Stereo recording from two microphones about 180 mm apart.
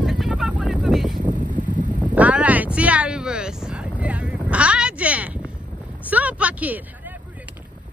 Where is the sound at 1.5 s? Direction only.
45° right (ahead or behind).